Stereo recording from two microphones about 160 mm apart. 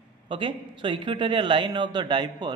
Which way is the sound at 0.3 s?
30° right (ahead or behind).